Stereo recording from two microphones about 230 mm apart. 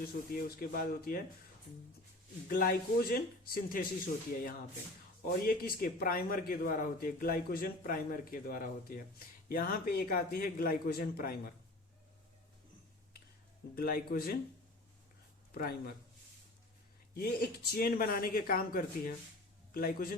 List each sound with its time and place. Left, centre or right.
0.3 s speech: left
2.5 s speech: left
13.7 s speech: left
17.2 s speech: left